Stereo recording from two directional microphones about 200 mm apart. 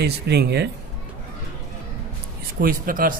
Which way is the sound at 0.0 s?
55° right (ahead or behind).